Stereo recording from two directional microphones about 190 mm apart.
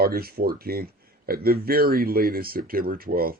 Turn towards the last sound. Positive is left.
turn(degrees=-50)  # may be behind; listen again after turning